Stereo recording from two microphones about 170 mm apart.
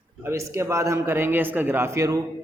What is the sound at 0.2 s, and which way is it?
A man's voice, 15° right (ahead or behind).